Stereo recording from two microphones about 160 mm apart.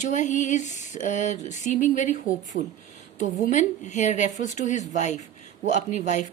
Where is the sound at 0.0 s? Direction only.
50° left (ahead or behind).